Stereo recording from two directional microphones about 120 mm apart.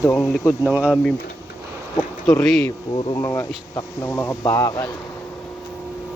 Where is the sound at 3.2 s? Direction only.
25° left (ahead or behind).